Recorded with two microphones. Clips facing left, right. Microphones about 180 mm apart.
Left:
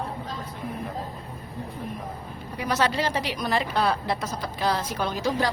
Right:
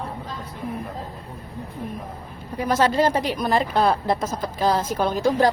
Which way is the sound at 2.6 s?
45° right (ahead or behind).